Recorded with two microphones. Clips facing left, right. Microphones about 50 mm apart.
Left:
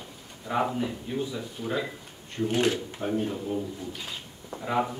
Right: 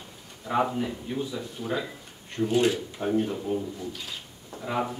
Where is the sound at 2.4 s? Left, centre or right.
Left.